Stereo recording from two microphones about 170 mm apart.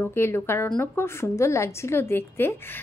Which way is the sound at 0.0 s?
15° left (ahead or behind).